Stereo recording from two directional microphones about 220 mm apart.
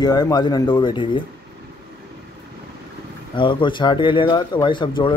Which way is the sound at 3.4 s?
20° left (ahead or behind).